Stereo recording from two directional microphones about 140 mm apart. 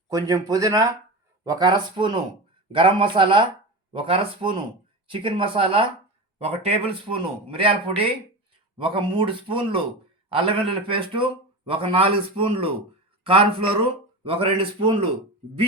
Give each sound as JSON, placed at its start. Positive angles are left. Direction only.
{"t": 0.1, "sound": "speech", "side_deg": -25}